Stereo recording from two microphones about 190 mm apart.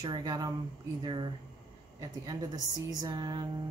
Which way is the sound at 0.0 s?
20° right (ahead or behind).